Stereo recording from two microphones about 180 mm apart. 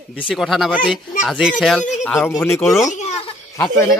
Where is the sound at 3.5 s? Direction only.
20° left (ahead or behind).